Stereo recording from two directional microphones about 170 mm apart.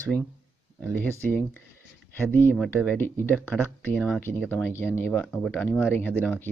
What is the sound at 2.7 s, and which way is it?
Speech, 10° left (ahead or behind).